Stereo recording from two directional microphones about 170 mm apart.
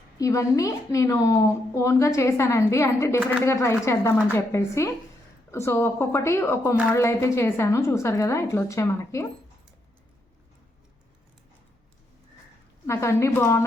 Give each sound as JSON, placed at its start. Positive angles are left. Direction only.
{"t": 0.2, "sound": "a woman's voice", "side_deg": 20}
{"t": 12.9, "sound": "a woman's voice", "side_deg": 15}